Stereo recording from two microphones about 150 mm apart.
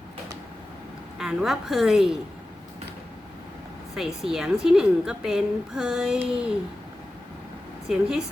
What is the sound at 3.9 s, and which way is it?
A woman's voice, 5° right (ahead or behind).